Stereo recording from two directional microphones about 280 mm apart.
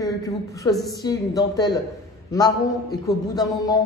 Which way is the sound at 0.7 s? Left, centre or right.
Centre.